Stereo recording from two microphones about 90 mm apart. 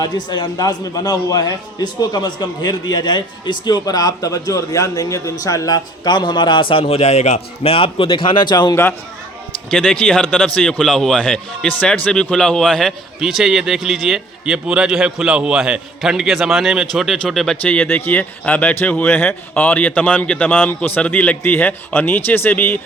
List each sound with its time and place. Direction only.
0.0 s a man's voice: 50° left (ahead or behind)
8.7 s speech: 25° left (ahead or behind)
9.6 s a man's voice: 5° left (ahead or behind)
13.1 s a man's voice: 5° right (ahead or behind)
17.6 s speech: 15° left (ahead or behind)